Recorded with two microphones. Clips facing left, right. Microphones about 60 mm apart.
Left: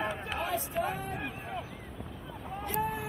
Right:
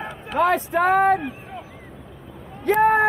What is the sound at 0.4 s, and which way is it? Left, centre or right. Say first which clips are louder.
Speech: right 15 dB; right.